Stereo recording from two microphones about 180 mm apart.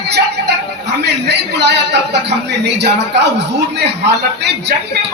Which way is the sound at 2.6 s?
70° right (ahead or behind).